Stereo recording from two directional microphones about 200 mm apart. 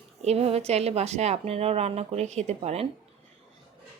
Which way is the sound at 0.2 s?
30° right (ahead or behind).